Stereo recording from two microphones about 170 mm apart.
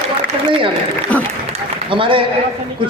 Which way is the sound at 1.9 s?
30° right (ahead or behind).